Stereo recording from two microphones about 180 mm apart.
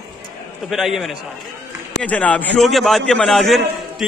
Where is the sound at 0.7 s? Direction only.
Centre (ahead or behind).